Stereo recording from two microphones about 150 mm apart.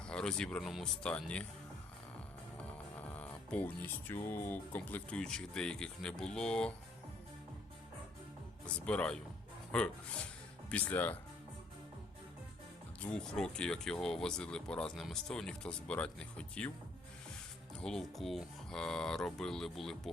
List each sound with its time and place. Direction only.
0.0 s speech: 5° left (ahead or behind)
2.6 s speech: 10° left (ahead or behind)
8.6 s speech: 10° left (ahead or behind)
13.0 s speech: 5° left (ahead or behind)
17.7 s speech: 5° left (ahead or behind)